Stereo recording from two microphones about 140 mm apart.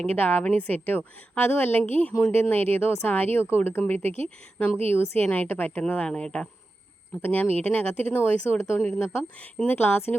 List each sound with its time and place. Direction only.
0.0 s a woman's voice: 10° left (ahead or behind)